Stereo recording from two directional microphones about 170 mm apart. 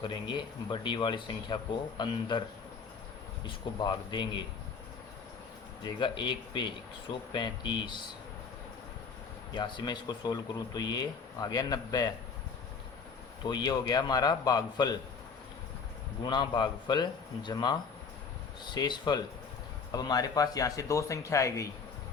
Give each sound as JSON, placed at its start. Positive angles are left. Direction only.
{"t": 0.0, "sound": "speech", "side_deg": 25}
{"t": 3.4, "sound": "speech", "side_deg": 25}
{"t": 5.8, "sound": "speech", "side_deg": 25}
{"t": 9.6, "sound": "speech", "side_deg": 25}
{"t": 13.4, "sound": "speech", "side_deg": 25}
{"t": 16.2, "sound": "speech", "side_deg": 25}